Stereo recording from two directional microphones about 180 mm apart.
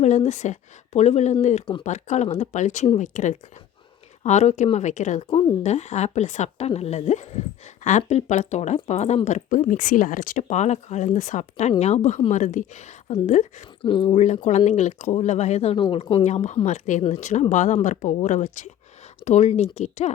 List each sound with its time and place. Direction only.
0.2 s speech: 40° left (ahead or behind)
13.8 s speech: 30° left (ahead or behind)
14.2 s speech: 40° left (ahead or behind)
16.2 s speech: 40° left (ahead or behind)